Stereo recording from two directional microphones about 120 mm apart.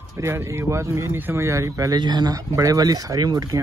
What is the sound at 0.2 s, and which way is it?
Speech, 20° right (ahead or behind).